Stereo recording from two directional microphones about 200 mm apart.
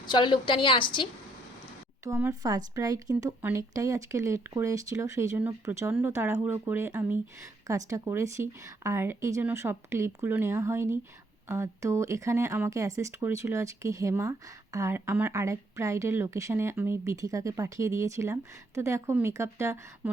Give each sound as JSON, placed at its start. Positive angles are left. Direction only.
{"t": 0.0, "sound": "a woman's voice", "side_deg": 20}
{"t": 2.0, "sound": "speech", "side_deg": -15}